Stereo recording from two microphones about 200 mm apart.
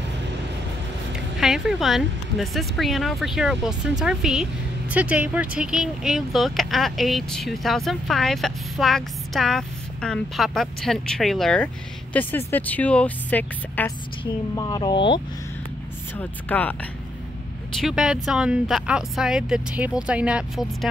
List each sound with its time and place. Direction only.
1.4 s speech: centre (ahead or behind)
14.5 s speech: 20° left (ahead or behind)
16.2 s speech: 10° left (ahead or behind)
17.7 s speech: centre (ahead or behind)